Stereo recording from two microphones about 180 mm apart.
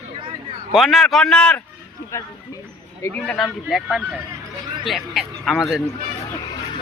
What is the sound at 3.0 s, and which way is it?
Speech, 15° left (ahead or behind).